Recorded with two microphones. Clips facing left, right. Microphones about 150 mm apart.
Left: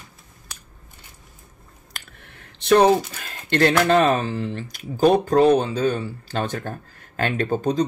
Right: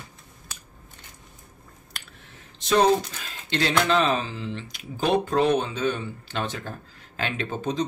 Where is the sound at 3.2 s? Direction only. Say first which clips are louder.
Left 7 dB; 55° left (ahead or behind).